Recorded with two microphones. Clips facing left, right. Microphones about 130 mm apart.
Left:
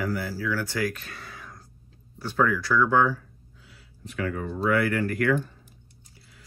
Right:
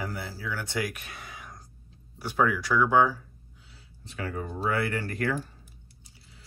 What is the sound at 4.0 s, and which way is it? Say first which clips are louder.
Speech: left 4 dB; 30° right (ahead or behind).